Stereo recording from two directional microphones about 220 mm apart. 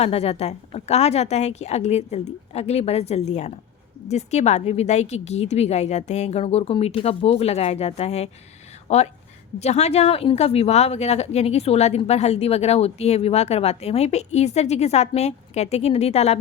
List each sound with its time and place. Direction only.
0.0 s speech: 30° left (ahead or behind)